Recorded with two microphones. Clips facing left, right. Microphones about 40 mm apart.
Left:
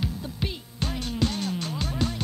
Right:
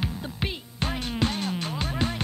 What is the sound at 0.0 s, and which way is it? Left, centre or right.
Music, right.